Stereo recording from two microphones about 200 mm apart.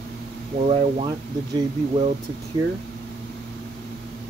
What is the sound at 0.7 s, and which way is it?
Speech, 20° right (ahead or behind).